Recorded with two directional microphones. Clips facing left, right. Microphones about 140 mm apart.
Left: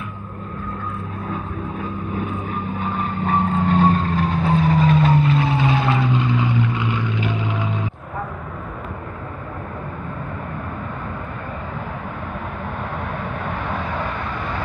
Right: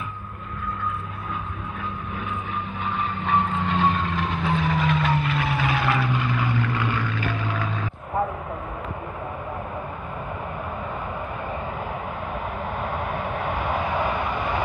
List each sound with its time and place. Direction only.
1.3 s vehicle: 40° left (ahead or behind); by 7.8 s 20° left (ahead or behind)
13.5 s vehicle: 10° right (ahead or behind)